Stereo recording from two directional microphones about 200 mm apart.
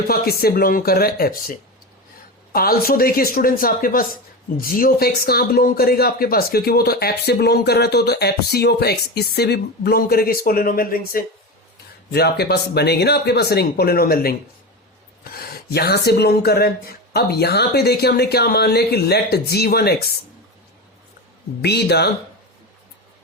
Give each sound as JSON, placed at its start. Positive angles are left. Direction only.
{"t": 0.1, "sound": "speech", "side_deg": 50}
{"t": 21.6, "sound": "speech", "side_deg": 55}